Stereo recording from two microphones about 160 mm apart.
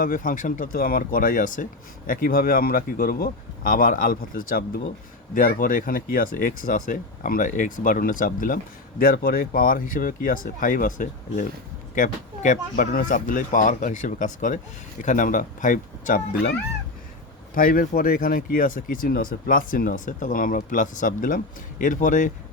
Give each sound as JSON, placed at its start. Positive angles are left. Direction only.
{"t": 0.0, "sound": "speech", "side_deg": 60}
{"t": 2.0, "sound": "speech", "side_deg": 65}
{"t": 5.3, "sound": "speech", "side_deg": 60}
{"t": 9.0, "sound": "speech", "side_deg": 70}
{"t": 17.5, "sound": "speech", "side_deg": 60}